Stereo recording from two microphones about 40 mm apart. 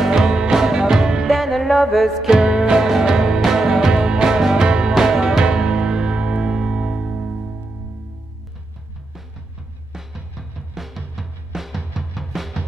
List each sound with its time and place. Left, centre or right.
0.0 s music: centre
1.2 s music: centre
2.4 s music: right
10.8 s drum: centre